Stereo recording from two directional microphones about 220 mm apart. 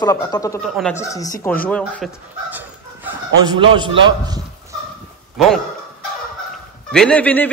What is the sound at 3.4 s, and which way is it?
A man's voice, 20° right (ahead or behind).